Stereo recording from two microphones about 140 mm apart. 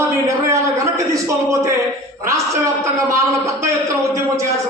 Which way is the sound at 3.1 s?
20° right (ahead or behind).